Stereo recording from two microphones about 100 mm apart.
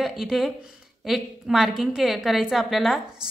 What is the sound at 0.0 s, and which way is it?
A woman's voice, 5° right (ahead or behind).